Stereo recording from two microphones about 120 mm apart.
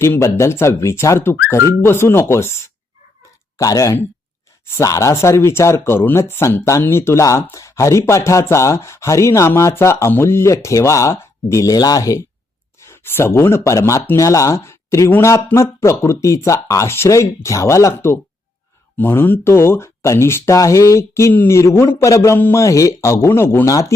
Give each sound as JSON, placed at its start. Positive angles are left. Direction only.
{"t": 0.0, "sound": "speech", "side_deg": 25}
{"t": 3.6, "sound": "speech", "side_deg": 30}